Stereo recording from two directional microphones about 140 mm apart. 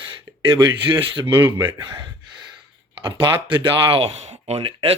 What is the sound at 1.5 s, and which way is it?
Speech, 20° right (ahead or behind).